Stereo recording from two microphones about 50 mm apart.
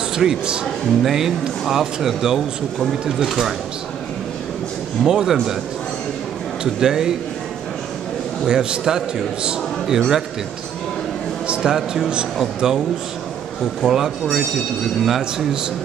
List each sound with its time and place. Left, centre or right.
0.1 s a man's voice: centre
5.0 s a man's voice: centre
6.6 s a man's voice: centre
8.5 s a man's voice: centre
9.9 s speech: centre
11.4 s a sound: right
11.7 s a man's voice: centre